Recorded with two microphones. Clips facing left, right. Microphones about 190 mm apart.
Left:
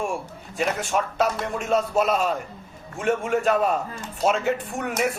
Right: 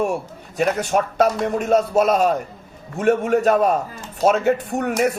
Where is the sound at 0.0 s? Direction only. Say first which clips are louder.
Right 6 dB; 40° right (ahead or behind).